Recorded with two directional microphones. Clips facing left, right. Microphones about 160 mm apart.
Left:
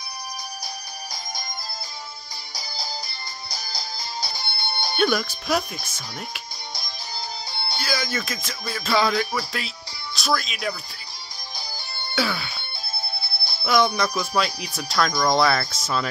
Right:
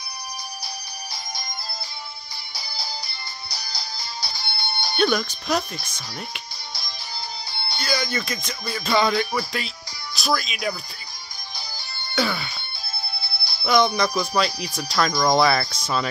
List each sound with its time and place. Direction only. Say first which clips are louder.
2.5 s music: left 1 dB; 45° left (ahead or behind)
4.9 s speech: right 1 dB; 5° left (ahead or behind)
7.8 s speech: right 2 dB; 5° left (ahead or behind)
12.2 s music: right 1 dB; centre (ahead or behind)
13.4 s music: left 1 dB; 50° left (ahead or behind)
13.7 s speech: right 1 dB; 5° left (ahead or behind)